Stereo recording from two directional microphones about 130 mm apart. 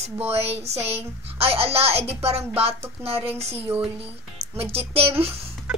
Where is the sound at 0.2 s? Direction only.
50° right (ahead or behind).